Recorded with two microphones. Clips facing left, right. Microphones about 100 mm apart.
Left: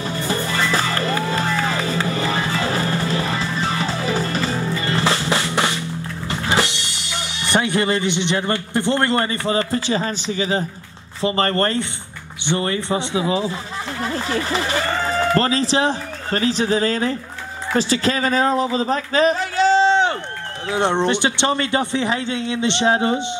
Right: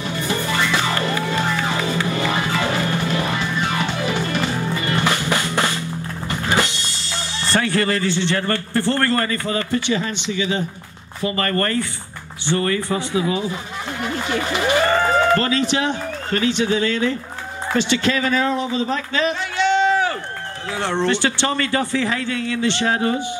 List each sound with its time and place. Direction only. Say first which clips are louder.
0.0 s music: even; 30° left (ahead or behind)
11.1 s a man's voice: left 2 dB; 30° left (ahead or behind)
14.0 s a sound: even; 35° left (ahead or behind)
15.3 s a man's voice: left 1 dB; 30° left (ahead or behind)